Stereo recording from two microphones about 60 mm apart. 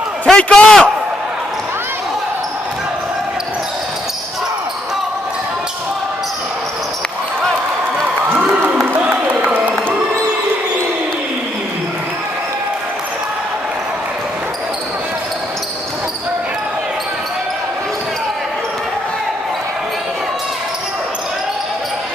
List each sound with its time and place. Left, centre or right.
0.3 s a man's voice: centre